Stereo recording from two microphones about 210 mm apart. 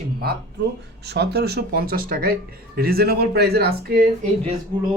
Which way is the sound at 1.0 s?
50° right (ahead or behind).